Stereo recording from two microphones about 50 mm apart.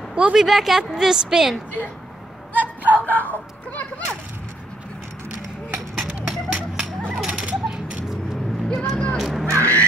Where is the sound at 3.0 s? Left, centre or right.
Left.